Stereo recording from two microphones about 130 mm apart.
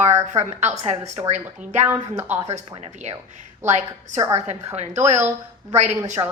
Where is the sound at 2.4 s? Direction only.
55° right (ahead or behind).